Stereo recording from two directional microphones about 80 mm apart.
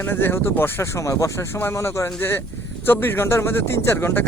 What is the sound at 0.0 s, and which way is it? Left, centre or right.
Speech, left.